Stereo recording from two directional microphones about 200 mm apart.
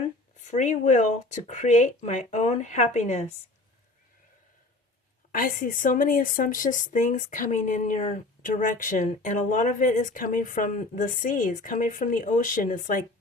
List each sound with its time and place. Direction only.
0.3 s a woman's voice: 40° left (ahead or behind)
5.3 s a woman's voice: 45° left (ahead or behind)